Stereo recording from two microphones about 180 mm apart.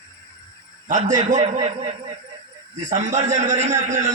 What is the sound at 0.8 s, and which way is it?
Speech, 40° right (ahead or behind).